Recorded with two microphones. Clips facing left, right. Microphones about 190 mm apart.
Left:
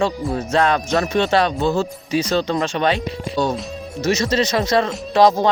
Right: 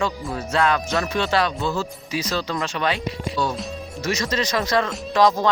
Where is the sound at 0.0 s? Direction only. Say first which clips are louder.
Left 5 dB; 25° left (ahead or behind).